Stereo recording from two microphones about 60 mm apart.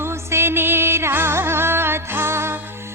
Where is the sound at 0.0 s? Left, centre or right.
Right.